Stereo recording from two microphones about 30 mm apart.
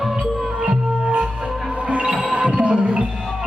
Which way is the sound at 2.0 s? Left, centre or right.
Right.